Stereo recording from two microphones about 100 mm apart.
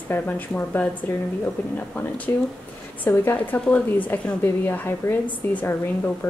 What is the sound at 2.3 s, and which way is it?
A woman's voice, 25° left (ahead or behind).